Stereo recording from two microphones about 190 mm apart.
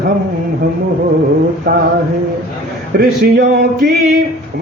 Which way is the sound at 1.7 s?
55° right (ahead or behind).